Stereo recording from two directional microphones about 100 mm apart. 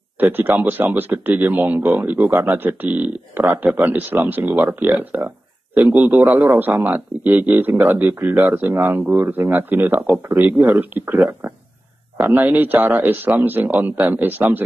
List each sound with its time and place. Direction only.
0.2 s a man's voice: 20° right (ahead or behind)